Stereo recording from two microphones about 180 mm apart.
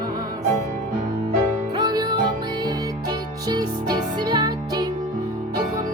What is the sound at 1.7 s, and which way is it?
Music, 20° right (ahead or behind).